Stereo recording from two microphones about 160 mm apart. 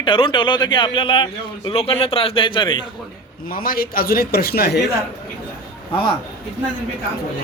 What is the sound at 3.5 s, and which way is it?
A man's voice, 65° left (ahead or behind).